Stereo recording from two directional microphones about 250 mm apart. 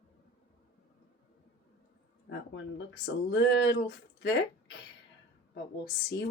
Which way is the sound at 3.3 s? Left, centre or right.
Left.